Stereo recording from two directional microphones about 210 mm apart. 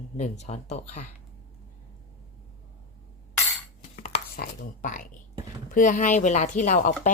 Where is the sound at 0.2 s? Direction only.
35° left (ahead or behind).